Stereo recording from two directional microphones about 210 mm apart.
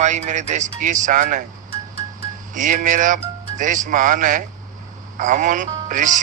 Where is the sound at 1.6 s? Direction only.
50° left (ahead or behind).